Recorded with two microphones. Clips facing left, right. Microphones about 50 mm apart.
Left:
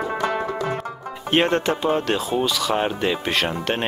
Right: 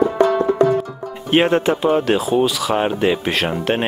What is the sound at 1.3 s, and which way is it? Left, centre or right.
Speech, centre.